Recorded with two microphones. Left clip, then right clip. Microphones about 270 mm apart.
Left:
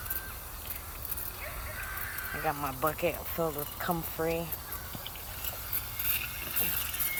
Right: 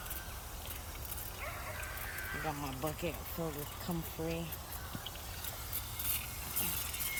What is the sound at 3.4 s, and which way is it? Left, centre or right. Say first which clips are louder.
Speech: left 10 dB; left.